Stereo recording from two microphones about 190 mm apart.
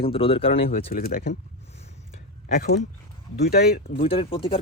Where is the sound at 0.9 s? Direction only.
50° left (ahead or behind).